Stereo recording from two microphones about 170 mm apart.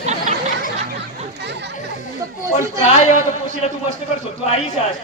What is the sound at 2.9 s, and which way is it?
A man's voice, 40° left (ahead or behind).